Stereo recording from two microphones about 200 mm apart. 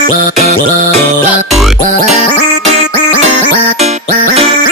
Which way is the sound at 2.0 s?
35° right (ahead or behind).